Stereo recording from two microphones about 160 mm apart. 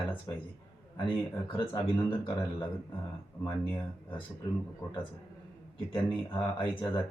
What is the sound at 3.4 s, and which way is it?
Speech, 30° left (ahead or behind).